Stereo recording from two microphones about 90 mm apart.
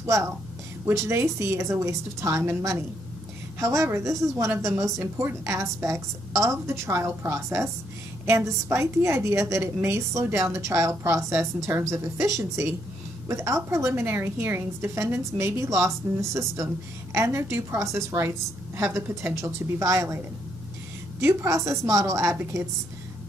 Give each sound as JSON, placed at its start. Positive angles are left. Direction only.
{"t": 0.0, "sound": "a woman's voice", "side_deg": -35}
{"t": 21.2, "sound": "a woman's voice", "side_deg": -30}